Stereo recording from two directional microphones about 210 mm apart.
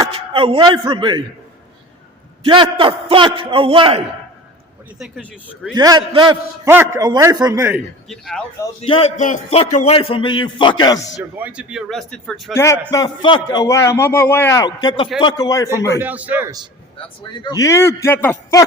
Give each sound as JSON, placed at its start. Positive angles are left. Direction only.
{"t": 0.1, "sound": "a man's voice", "side_deg": -25}
{"t": 2.4, "sound": "a man's voice", "side_deg": -25}
{"t": 4.9, "sound": "speech", "side_deg": 0}
{"t": 5.7, "sound": "a man's voice", "side_deg": -20}
{"t": 6.7, "sound": "a man's voice", "side_deg": -10}
{"t": 8.0, "sound": "speech", "side_deg": 0}
{"t": 8.8, "sound": "a man's voice", "side_deg": 30}
{"t": 11.2, "sound": "speech", "side_deg": -10}
{"t": 12.5, "sound": "a man's voice", "side_deg": 15}
{"t": 16.0, "sound": "a man's voice", "side_deg": -5}
{"t": 17.4, "sound": "a man's voice", "side_deg": 15}